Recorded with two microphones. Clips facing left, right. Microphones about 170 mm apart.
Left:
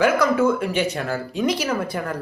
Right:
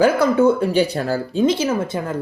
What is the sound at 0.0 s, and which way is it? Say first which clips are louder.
Speech: right 3 dB; 30° right (ahead or behind).